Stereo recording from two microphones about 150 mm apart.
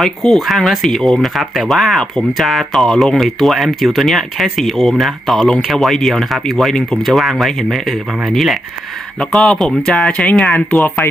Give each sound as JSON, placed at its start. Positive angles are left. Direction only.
{"t": 0.0, "sound": "speech", "side_deg": 0}